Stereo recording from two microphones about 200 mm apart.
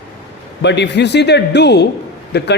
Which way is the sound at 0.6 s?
60° left (ahead or behind).